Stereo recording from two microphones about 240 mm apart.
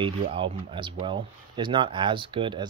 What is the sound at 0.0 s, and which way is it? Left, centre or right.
Speech, right.